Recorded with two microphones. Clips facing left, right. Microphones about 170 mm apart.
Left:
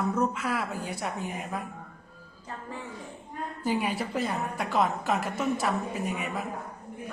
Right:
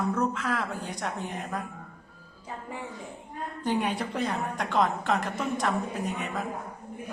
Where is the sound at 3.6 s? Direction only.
5° left (ahead or behind).